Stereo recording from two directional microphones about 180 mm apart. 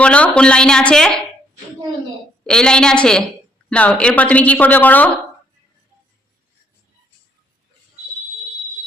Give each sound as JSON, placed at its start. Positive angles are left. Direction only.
{"t": 0.0, "sound": "speech", "side_deg": 5}
{"t": 2.4, "sound": "speech", "side_deg": 5}